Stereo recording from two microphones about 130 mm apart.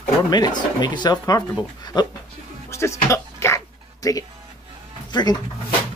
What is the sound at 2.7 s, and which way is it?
Music, 20° left (ahead or behind).